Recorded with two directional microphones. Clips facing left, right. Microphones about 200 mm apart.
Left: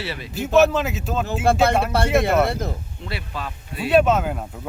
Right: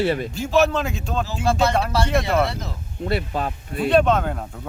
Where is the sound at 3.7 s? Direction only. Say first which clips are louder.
Even; 5° left (ahead or behind).